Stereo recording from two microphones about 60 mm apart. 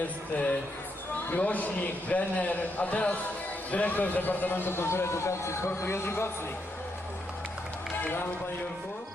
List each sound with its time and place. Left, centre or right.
0.3 s a man's voice: left